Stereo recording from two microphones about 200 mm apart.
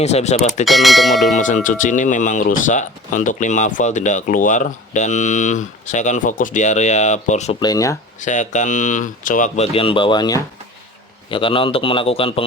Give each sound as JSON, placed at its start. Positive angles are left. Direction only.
{"t": 0.0, "sound": "speech", "side_deg": 35}
{"t": 0.6, "sound": "speech", "side_deg": 0}
{"t": 1.4, "sound": "speech", "side_deg": 40}
{"t": 7.6, "sound": "speech", "side_deg": 20}
{"t": 8.2, "sound": "a man's voice", "side_deg": 40}